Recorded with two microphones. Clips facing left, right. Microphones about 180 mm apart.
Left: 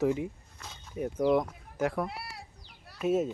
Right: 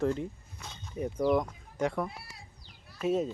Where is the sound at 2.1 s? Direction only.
70° left (ahead or behind).